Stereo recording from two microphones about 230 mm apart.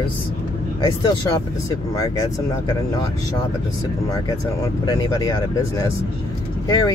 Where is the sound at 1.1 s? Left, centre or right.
Centre.